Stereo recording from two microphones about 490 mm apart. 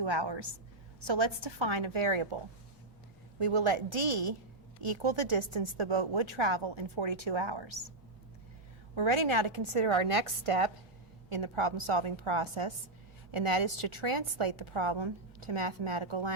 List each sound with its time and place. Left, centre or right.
0.0 s a woman's voice: right
3.3 s a woman's voice: right
9.0 s a woman's voice: right